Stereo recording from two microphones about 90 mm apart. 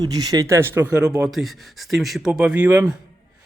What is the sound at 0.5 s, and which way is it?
Speech, 25° right (ahead or behind).